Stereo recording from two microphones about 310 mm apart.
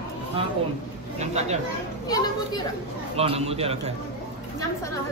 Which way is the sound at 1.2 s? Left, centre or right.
Right.